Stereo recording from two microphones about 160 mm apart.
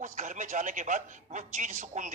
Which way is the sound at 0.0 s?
50° right (ahead or behind).